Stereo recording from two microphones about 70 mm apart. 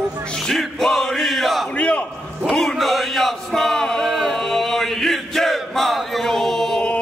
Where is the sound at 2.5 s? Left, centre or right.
Centre.